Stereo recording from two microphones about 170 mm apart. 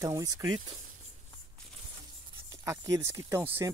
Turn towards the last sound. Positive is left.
turn(degrees=-15)  # may be behind; listen again after turning